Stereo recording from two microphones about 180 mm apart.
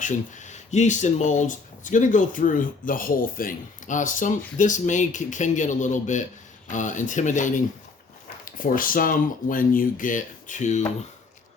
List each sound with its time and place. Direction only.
0.0 s speech: 40° left (ahead or behind)